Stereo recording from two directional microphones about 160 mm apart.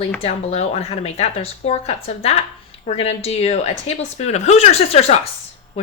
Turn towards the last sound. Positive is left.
turn(degrees=40)  # may be behind; listen again after turning